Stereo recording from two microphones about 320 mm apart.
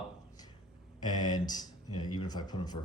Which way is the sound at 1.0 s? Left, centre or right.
Centre.